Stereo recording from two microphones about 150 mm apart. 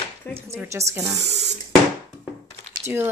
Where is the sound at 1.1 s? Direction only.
45° right (ahead or behind).